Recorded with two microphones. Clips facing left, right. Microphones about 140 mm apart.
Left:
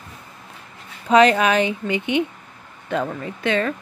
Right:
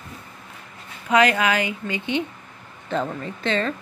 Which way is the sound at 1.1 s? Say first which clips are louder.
Left 4 dB; 25° left (ahead or behind).